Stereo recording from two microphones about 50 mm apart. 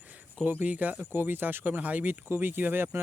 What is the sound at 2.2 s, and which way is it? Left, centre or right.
Speech, right.